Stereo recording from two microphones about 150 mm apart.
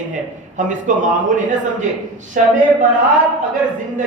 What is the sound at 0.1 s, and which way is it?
A man's voice, 60° right (ahead or behind).